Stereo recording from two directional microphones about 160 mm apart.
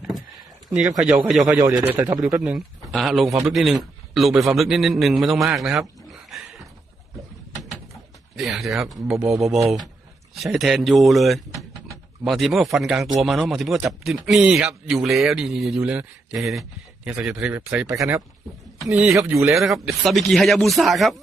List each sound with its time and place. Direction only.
0.7 s a man's voice: 5° right (ahead or behind)
8.4 s a man's voice: centre (ahead or behind)
17.7 s speech: 15° right (ahead or behind)
18.9 s a man's voice: 5° right (ahead or behind)
19.3 s speech: 15° right (ahead or behind)
20.1 s a man's voice: centre (ahead or behind)